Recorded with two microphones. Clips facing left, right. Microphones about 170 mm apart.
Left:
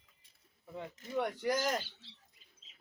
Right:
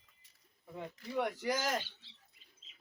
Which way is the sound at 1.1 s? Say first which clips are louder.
Left 1 dB; 5° right (ahead or behind).